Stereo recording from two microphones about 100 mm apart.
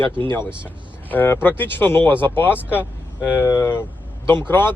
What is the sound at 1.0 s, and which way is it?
Speech, 20° left (ahead or behind).